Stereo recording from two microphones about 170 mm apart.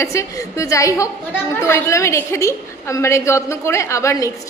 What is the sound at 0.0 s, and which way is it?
A woman's voice, 20° left (ahead or behind).